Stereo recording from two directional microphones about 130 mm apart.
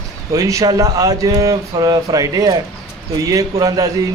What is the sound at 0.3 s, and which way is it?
A man's voice, 25° right (ahead or behind).